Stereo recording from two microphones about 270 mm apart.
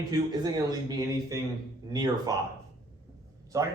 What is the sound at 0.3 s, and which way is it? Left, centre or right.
A man's voice, centre.